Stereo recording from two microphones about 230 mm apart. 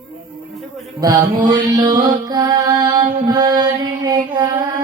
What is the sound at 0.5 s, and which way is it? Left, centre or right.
Music, centre.